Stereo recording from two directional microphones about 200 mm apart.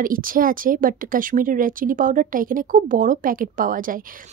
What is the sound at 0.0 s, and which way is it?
A woman's voice, 45° right (ahead or behind).